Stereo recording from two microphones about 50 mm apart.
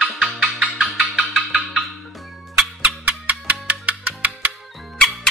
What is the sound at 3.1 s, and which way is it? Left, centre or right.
Music, right.